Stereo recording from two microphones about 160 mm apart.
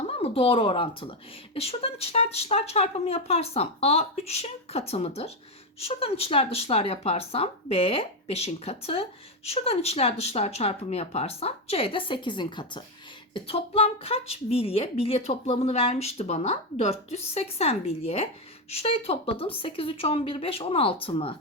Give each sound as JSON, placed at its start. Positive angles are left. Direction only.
{"t": 0.1, "sound": "a woman's voice", "side_deg": 35}